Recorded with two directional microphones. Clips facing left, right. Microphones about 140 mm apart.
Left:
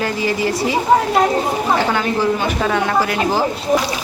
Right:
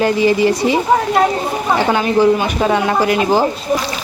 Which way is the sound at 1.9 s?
20° right (ahead or behind).